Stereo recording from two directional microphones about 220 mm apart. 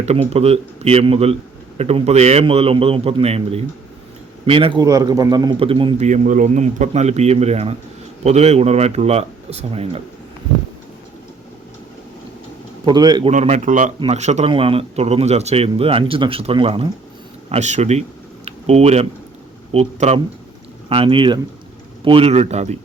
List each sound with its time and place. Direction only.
0.0 s a man's voice: 30° right (ahead or behind)
12.8 s a man's voice: 20° right (ahead or behind)
13.3 s a man's voice: 35° right (ahead or behind)
18.4 s a sound: 30° right (ahead or behind)
19.7 s a man's voice: 30° right (ahead or behind)